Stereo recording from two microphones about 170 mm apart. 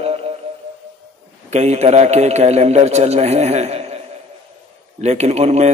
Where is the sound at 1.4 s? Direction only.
40° right (ahead or behind).